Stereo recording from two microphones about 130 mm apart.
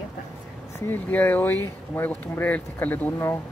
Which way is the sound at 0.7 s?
15° left (ahead or behind).